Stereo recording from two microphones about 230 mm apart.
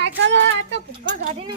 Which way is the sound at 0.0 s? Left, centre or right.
Right.